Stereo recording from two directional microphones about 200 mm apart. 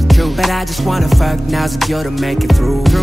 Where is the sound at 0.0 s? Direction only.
Centre (ahead or behind).